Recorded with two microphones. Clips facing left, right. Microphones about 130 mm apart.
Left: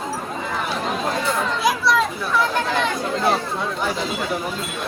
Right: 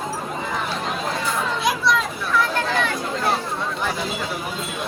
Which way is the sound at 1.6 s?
Centre (ahead or behind).